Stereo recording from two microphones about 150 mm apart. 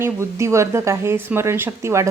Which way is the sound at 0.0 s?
20° right (ahead or behind).